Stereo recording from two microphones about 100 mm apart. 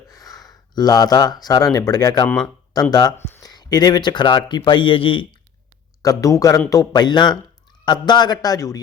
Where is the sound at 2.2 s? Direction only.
10° left (ahead or behind).